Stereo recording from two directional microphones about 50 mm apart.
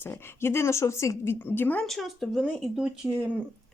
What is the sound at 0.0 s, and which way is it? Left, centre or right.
A woman's voice, left.